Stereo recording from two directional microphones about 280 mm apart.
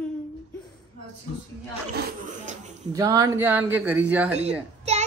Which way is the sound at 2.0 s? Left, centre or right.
Right.